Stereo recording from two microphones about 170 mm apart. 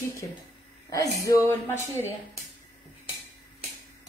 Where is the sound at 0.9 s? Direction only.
20° left (ahead or behind).